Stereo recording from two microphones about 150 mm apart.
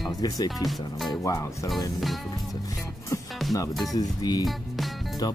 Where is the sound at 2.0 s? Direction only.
Centre (ahead or behind).